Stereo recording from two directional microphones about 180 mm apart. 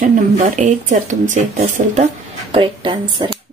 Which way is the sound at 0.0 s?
45° right (ahead or behind).